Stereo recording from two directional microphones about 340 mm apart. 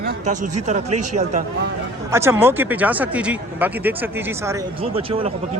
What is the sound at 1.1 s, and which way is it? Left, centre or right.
Speech, right.